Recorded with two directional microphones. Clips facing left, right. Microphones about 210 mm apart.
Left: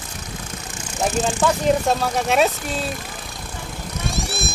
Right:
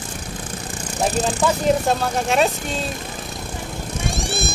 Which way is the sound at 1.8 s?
Centre (ahead or behind).